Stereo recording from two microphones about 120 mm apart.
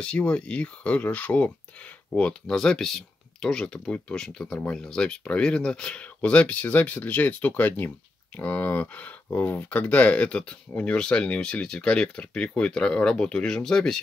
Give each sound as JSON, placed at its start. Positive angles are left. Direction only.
{"t": 0.0, "sound": "speech", "side_deg": 10}